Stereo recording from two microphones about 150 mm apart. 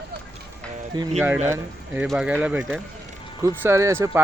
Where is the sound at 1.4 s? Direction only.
15° right (ahead or behind).